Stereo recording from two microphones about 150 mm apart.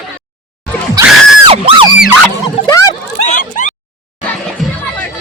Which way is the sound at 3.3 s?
60° left (ahead or behind).